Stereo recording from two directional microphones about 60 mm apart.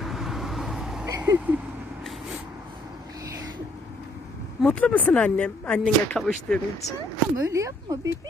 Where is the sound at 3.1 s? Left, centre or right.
Right.